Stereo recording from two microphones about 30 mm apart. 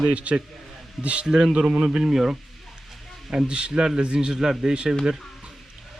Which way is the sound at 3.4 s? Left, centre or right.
Right.